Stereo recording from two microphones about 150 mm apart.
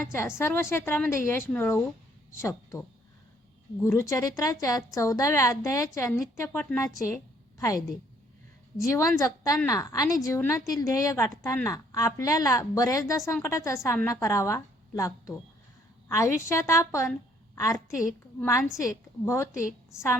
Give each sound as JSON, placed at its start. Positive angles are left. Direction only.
{"t": 0.1, "sound": "a woman's voice", "side_deg": 15}
{"t": 3.8, "sound": "a woman's voice", "side_deg": 20}
{"t": 8.8, "sound": "a woman's voice", "side_deg": 20}